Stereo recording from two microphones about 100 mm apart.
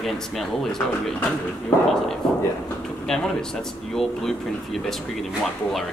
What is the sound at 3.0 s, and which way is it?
Speech, 5° left (ahead or behind).